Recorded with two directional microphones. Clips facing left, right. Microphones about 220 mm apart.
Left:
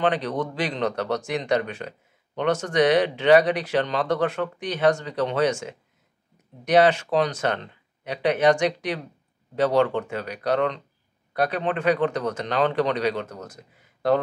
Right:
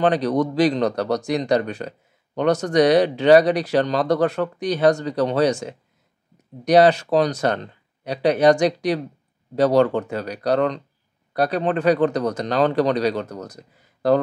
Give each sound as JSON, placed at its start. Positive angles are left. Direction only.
{"t": 0.0, "sound": "speech", "side_deg": -40}